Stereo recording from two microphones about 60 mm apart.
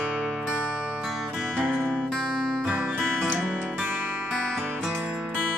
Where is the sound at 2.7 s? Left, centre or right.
Right.